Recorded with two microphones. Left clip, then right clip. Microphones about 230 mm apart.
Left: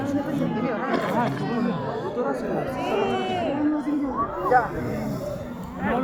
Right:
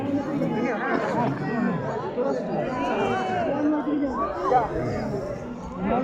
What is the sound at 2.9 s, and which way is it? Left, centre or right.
Run, left.